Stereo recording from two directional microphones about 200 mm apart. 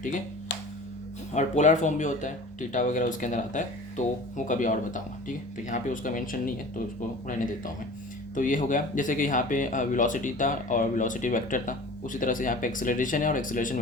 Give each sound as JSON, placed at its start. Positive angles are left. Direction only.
{"t": 1.3, "sound": "speech", "side_deg": 35}